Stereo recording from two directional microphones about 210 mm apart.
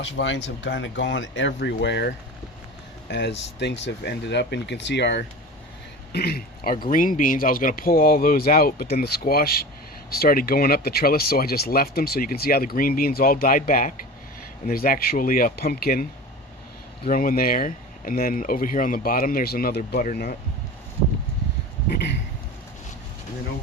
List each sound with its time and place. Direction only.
0.0 s speech: 60° left (ahead or behind)
17.1 s speech: 40° left (ahead or behind)